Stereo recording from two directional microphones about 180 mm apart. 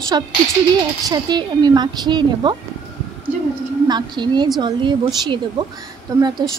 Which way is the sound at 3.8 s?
25° right (ahead or behind).